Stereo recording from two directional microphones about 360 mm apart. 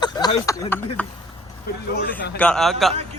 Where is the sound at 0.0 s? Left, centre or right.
Centre.